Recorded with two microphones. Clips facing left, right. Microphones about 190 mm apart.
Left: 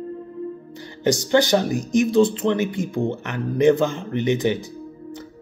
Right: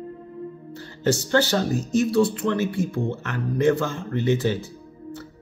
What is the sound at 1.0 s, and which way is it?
Speech, 15° left (ahead or behind).